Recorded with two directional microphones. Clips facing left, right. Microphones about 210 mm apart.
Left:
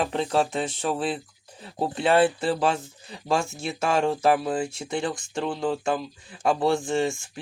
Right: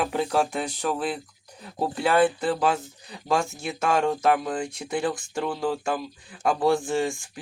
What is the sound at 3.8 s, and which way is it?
Speech, 30° left (ahead or behind).